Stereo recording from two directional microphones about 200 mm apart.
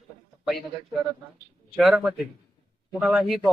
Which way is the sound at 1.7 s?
Centre (ahead or behind).